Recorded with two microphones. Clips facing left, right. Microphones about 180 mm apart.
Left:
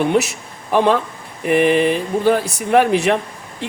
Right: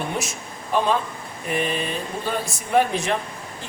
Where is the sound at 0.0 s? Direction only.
70° left (ahead or behind).